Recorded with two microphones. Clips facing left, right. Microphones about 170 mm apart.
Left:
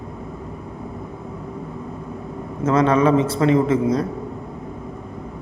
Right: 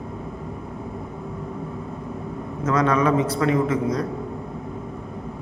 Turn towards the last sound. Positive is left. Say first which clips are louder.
# left 4 dB
turn(degrees=25)  # may be behind; listen again after turning